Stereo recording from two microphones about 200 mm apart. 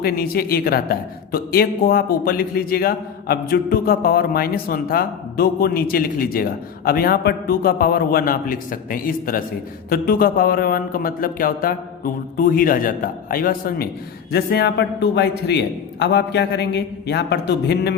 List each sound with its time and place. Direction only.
0.0 s a man's voice: 50° left (ahead or behind)